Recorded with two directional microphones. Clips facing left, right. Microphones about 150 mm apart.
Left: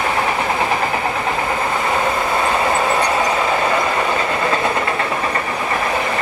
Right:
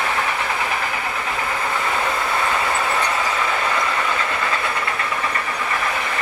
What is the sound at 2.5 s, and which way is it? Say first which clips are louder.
Train: left 5 dB; 30° left (ahead or behind).